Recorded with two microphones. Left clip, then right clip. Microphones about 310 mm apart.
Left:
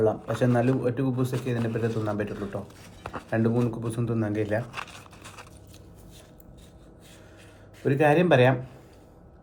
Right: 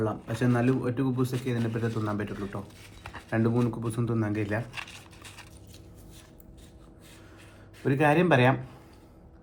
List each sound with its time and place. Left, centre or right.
0.0 s a man's voice: centre
4.6 s crumpling: left
7.9 s a man's voice: centre